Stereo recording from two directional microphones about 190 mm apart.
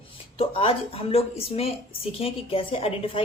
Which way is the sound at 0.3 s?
30° left (ahead or behind).